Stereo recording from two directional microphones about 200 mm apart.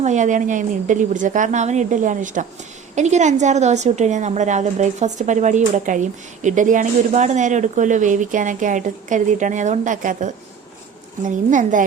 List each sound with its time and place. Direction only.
0.0 s a woman's voice: 35° right (ahead or behind)